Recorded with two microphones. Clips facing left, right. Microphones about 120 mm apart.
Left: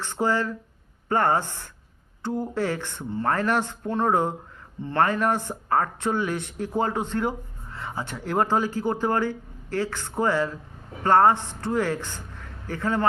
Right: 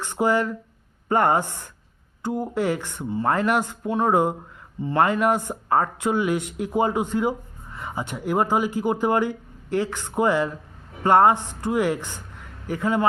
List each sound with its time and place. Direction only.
0.0 s speech: 15° right (ahead or behind)